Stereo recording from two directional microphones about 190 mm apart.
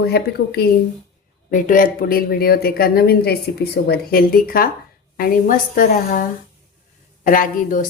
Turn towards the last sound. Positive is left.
turn(degrees=45)  # may be behind; listen again after turning